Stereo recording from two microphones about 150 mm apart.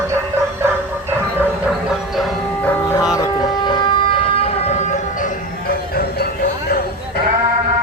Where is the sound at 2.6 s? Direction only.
15° left (ahead or behind).